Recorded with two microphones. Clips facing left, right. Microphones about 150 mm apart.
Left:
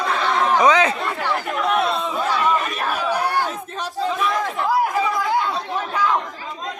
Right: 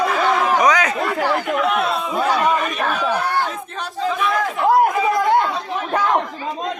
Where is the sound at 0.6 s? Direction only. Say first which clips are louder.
Left 1 dB; 25° left (ahead or behind).